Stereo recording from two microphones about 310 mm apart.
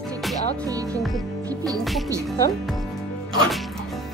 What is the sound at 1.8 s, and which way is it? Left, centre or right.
Speech, centre.